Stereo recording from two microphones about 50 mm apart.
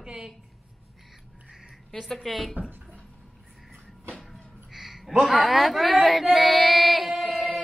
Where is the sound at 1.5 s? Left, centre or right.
Centre.